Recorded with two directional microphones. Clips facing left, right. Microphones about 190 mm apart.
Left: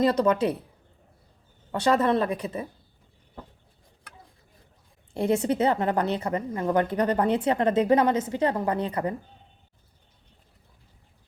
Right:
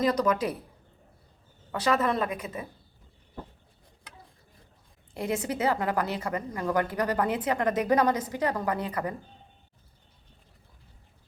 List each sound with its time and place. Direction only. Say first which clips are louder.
0.0 s a woman's voice: left 4 dB; 30° left (ahead or behind)
1.8 s a woman's voice: left 4 dB; 30° left (ahead or behind)
5.1 s a woman's voice: left 6 dB; 30° left (ahead or behind)